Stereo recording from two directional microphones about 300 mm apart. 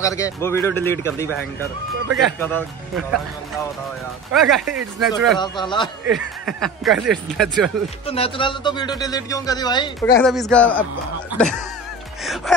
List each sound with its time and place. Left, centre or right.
0.0 s speech: centre
4.3 s speech: centre
5.4 s speech: centre
6.4 s speech: centre
8.1 s speech: centre
10.2 s speech: centre
12.5 s wail: centre